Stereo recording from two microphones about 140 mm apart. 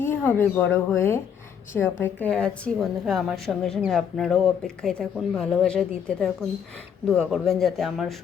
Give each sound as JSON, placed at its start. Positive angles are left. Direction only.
{"t": 0.0, "sound": "a woman's voice", "side_deg": 15}